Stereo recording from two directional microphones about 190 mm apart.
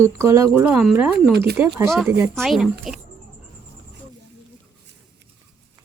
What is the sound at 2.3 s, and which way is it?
Speech, centre (ahead or behind).